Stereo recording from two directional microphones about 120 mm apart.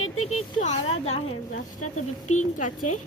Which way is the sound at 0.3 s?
70° left (ahead or behind).